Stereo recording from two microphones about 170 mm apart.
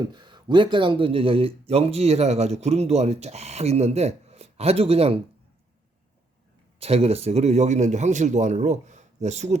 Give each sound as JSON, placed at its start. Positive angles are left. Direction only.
{"t": 0.0, "sound": "speech", "side_deg": -25}
{"t": 6.7, "sound": "a man's voice", "side_deg": -35}